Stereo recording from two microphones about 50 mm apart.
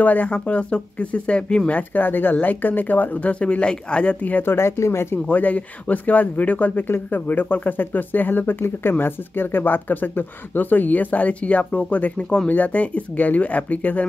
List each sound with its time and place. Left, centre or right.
0.0 s speech: left
0.3 s speech: left
1.7 s speech: left
4.5 s speech: left
5.3 s speech: left